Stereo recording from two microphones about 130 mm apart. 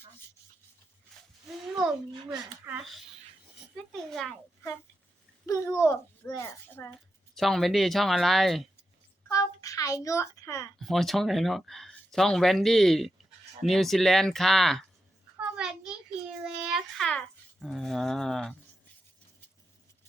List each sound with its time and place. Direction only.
1.1 s a sound: 5° left (ahead or behind)
2.7 s speech: 15° right (ahead or behind)
4.1 s speech: 5° left (ahead or behind)
5.7 s a child's voice: 20° left (ahead or behind)
7.3 s speech: centre (ahead or behind)
9.3 s a child's voice: 25° left (ahead or behind)
10.8 s a child's voice: centre (ahead or behind)